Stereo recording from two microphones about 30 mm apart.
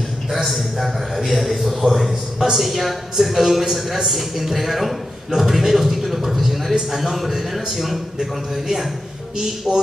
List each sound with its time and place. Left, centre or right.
0.6 s a man's voice: centre